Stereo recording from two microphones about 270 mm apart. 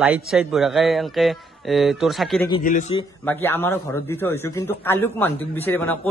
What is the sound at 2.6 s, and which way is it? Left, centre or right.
Speech, left.